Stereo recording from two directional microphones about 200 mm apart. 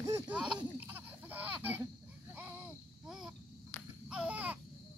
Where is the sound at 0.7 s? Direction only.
10° right (ahead or behind).